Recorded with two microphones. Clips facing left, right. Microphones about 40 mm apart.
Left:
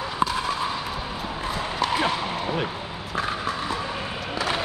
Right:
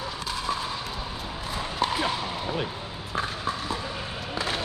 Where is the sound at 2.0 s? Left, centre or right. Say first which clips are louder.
Left 4 dB; left.